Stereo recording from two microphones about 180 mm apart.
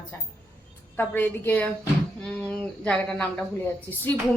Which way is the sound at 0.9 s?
10° left (ahead or behind).